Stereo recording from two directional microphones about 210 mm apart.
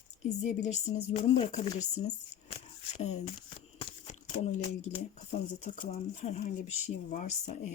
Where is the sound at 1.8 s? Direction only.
90° left.